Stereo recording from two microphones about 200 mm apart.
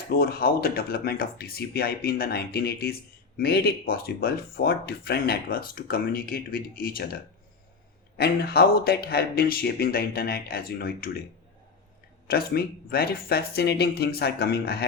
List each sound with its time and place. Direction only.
0.1 s speech: 50° left (ahead or behind)
12.3 s speech: 50° left (ahead or behind)